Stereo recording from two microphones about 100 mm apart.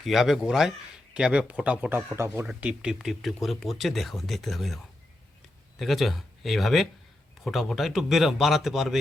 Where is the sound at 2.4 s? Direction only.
10° right (ahead or behind).